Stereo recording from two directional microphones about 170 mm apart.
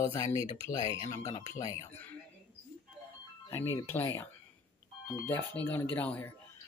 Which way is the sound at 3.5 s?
15° left (ahead or behind).